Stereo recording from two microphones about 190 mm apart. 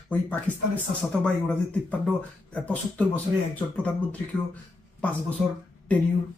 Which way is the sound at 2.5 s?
5° left (ahead or behind).